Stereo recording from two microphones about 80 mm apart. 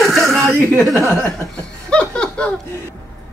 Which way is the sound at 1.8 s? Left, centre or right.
Centre.